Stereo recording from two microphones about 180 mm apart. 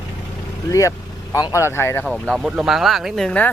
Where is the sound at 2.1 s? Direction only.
Centre (ahead or behind).